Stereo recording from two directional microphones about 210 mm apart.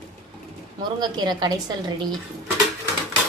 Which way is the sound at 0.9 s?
20° right (ahead or behind).